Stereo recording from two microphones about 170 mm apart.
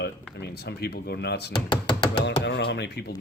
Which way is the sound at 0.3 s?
75° left (ahead or behind).